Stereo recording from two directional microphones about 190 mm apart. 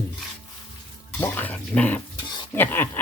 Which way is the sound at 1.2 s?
10° left (ahead or behind).